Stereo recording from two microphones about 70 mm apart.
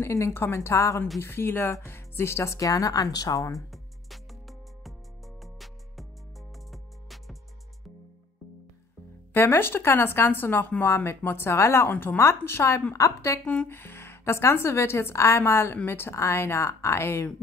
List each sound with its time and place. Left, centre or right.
0.0 s speech: left
3.5 s music: centre
9.3 s a woman's voice: left
13.7 s a woman's voice: left